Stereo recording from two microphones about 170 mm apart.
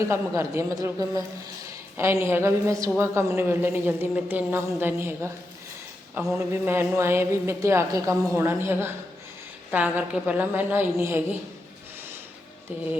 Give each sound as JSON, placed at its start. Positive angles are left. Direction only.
{"t": 0.1, "sound": "speech", "side_deg": -15}
{"t": 6.3, "sound": "speech", "side_deg": -15}